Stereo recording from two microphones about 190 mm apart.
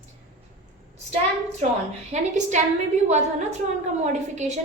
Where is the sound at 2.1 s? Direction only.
40° right (ahead or behind).